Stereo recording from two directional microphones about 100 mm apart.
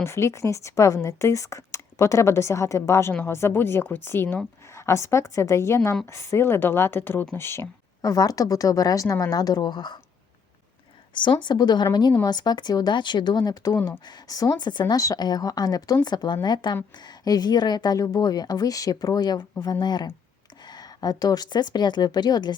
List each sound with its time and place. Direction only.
0.0 s a woman's voice: 25° left (ahead or behind)
8.0 s a woman's voice: 40° left (ahead or behind)
11.1 s speech: 50° left (ahead or behind)
14.9 s a woman's voice: 35° left (ahead or behind)